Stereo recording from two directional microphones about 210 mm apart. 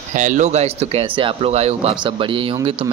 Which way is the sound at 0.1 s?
35° right (ahead or behind).